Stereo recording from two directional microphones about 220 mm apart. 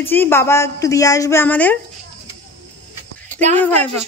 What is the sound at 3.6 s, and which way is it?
Speech, 10° left (ahead or behind).